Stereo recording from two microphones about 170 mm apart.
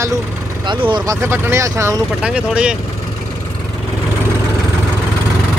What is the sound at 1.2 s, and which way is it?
Speech, 15° right (ahead or behind).